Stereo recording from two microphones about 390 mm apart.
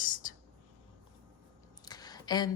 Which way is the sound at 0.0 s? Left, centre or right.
Left.